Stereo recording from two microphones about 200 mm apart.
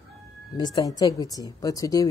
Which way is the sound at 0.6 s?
20° left (ahead or behind).